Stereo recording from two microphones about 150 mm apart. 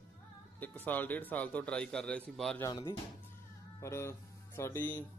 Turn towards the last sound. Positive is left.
turn(degrees=15)  # may be behind; listen again after turning